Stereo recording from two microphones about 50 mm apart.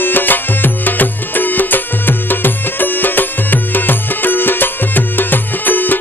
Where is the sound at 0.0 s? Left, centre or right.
Left.